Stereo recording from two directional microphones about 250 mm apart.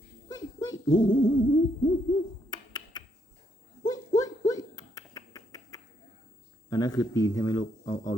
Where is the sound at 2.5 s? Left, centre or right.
Centre.